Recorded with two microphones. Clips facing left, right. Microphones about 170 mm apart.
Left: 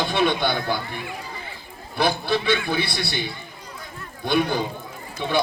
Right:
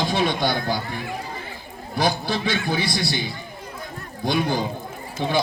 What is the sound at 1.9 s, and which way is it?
A man's voice, 60° left (ahead or behind).